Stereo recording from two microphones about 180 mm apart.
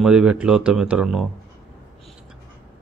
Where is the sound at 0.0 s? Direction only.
5° right (ahead or behind).